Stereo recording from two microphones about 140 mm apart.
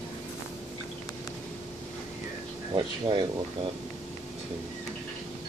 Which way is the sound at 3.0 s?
35° right (ahead or behind).